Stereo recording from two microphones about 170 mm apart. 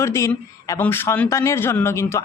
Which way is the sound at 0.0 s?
15° left (ahead or behind).